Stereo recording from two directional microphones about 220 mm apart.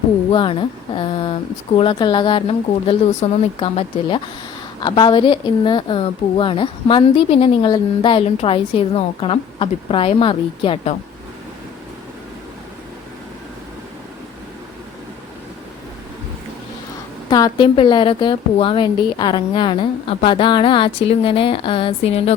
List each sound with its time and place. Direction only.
0.3 s a woman's voice: 20° left (ahead or behind)
17.2 s speech: 20° left (ahead or behind)